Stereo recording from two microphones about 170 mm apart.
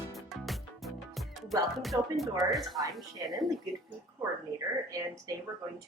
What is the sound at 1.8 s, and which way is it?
Speech, centre (ahead or behind).